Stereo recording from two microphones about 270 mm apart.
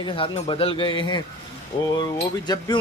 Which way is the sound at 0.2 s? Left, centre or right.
Centre.